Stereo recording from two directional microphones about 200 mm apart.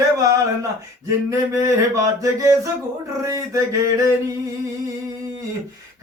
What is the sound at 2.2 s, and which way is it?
Speech, 15° right (ahead or behind).